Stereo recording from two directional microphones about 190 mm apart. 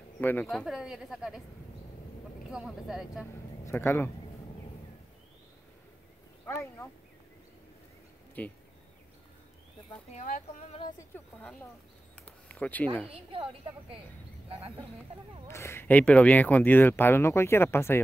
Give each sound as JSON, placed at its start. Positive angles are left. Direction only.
{"t": 0.2, "sound": "speech", "side_deg": 10}
{"t": 0.5, "sound": "a woman's voice", "side_deg": 0}
{"t": 2.5, "sound": "a woman's voice", "side_deg": -5}
{"t": 3.6, "sound": "speech", "side_deg": 15}
{"t": 6.4, "sound": "speech", "side_deg": 15}
{"t": 8.4, "sound": "speech", "side_deg": 5}
{"t": 10.1, "sound": "speech", "side_deg": 40}
{"t": 12.3, "sound": "a sound", "side_deg": 5}
{"t": 13.1, "sound": "a woman's voice", "side_deg": -30}
{"t": 15.4, "sound": "speech", "side_deg": 15}